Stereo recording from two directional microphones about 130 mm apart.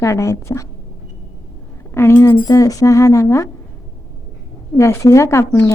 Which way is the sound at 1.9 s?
15° left (ahead or behind).